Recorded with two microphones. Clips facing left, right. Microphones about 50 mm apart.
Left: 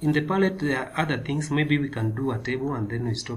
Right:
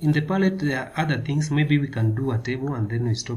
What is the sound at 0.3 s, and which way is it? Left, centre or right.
Speech, centre.